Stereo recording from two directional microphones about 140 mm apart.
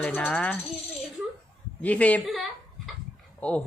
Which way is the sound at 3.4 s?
10° left (ahead or behind).